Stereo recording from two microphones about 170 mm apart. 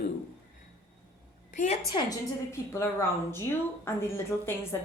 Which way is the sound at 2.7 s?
15° left (ahead or behind).